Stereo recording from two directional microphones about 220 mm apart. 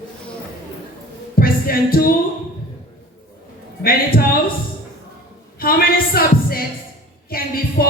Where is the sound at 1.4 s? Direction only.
40° left (ahead or behind).